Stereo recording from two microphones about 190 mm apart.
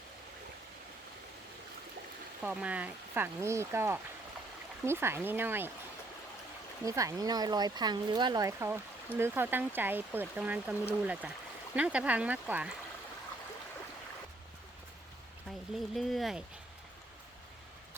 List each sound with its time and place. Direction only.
2.4 s speech: 5° right (ahead or behind)
6.8 s speech: 15° right (ahead or behind)
15.4 s speech: centre (ahead or behind)